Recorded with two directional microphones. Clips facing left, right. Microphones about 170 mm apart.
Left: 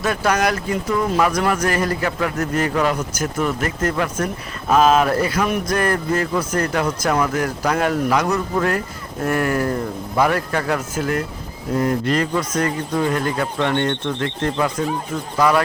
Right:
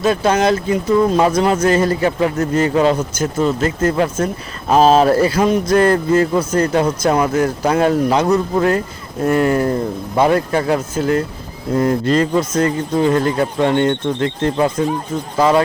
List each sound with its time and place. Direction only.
0.0 s speech: 25° right (ahead or behind)